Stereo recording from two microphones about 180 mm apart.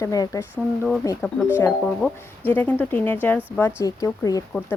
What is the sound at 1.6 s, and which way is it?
Speech, 5° left (ahead or behind).